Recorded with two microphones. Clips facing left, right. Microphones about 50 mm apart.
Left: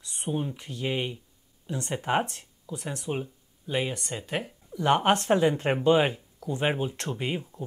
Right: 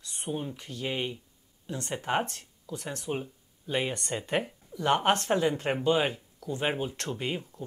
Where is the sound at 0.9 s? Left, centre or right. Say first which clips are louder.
Left 2 dB; centre.